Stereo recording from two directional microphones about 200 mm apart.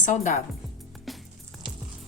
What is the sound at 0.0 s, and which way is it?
Speech, 35° left (ahead or behind).